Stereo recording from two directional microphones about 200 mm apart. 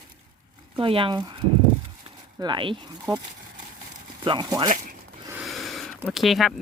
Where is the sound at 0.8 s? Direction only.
25° right (ahead or behind).